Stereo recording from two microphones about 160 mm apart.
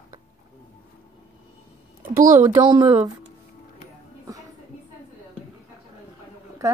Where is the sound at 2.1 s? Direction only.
55° right (ahead or behind).